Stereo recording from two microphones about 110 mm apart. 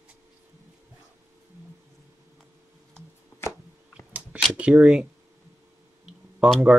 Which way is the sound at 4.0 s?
10° right (ahead or behind).